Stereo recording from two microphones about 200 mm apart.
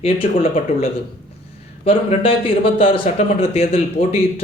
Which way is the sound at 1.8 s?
30° left (ahead or behind).